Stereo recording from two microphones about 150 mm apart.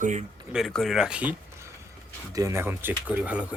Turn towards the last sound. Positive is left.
turn(degrees=-10)  # may be behind; listen again after turning